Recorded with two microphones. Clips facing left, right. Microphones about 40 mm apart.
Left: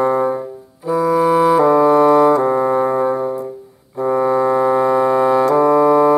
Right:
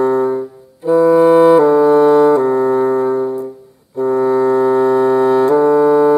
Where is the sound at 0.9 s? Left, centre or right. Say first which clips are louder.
Right 5 dB; centre.